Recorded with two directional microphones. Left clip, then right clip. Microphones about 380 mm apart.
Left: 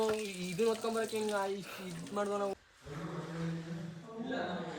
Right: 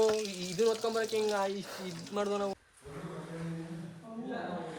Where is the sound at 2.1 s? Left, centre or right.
Right.